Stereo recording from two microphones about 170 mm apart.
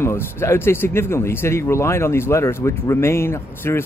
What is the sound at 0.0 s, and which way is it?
Speech, 15° left (ahead or behind).